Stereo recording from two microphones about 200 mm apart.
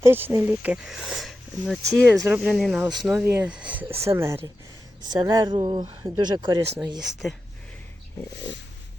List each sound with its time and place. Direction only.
0.0 s speech: 10° right (ahead or behind)
7.0 s speech: centre (ahead or behind)